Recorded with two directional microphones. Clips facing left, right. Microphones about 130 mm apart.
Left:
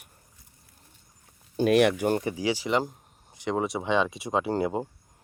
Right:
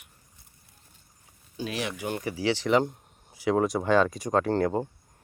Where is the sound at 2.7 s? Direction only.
Centre (ahead or behind).